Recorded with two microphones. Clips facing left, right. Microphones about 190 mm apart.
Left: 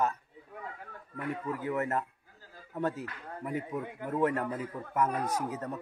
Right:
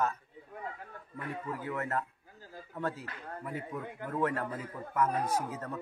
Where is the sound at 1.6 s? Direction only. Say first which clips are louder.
Left 3 dB; 20° left (ahead or behind).